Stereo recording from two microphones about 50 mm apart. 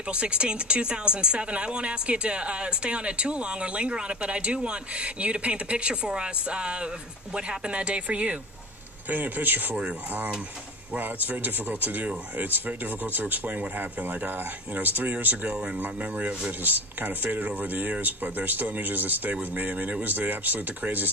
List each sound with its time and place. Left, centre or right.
0.1 s speech: right
9.1 s speech: right
15.5 s speech: right
15.8 s speech: right